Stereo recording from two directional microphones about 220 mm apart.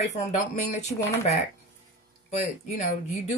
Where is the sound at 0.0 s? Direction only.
30° left (ahead or behind).